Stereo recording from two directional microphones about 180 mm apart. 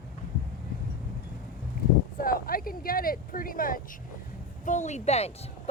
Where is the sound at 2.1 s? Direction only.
55° left (ahead or behind).